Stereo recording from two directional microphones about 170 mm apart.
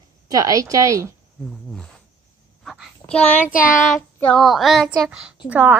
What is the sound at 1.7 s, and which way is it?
Speech, centre (ahead or behind).